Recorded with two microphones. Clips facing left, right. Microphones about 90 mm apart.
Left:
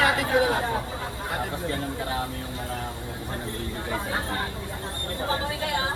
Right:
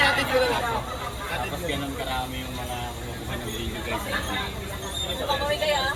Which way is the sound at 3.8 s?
20° left (ahead or behind).